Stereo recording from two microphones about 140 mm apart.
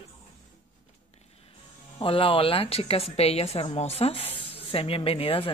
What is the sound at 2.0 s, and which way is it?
A woman's voice, 40° left (ahead or behind).